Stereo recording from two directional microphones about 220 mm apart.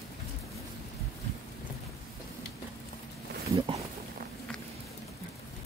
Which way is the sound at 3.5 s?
25° right (ahead or behind).